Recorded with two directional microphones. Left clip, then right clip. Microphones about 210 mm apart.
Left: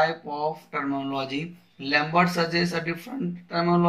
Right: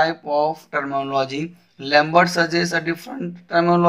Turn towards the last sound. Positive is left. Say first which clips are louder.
# right 7 dB
turn(degrees=-50)  # may be behind; listen again after turning